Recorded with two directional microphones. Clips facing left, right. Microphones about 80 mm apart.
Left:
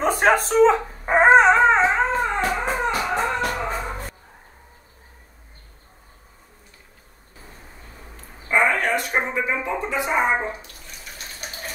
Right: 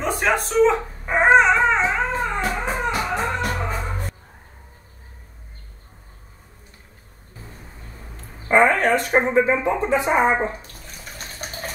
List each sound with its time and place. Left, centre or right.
0.0 s a sound: left
0.5 s dog: left
3.1 s music: left
8.2 s speech: right
10.4 s bathtub: right